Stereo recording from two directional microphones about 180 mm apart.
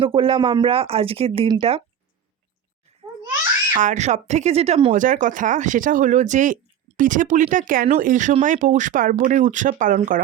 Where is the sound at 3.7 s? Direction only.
45° right (ahead or behind).